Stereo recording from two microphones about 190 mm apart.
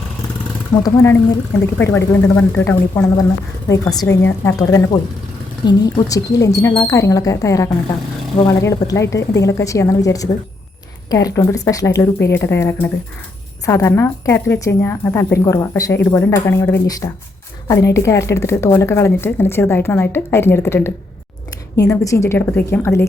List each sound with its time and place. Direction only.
0.8 s a woman's voice: 15° left (ahead or behind)